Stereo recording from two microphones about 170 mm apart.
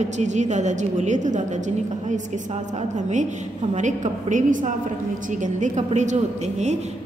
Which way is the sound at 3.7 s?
45° right (ahead or behind).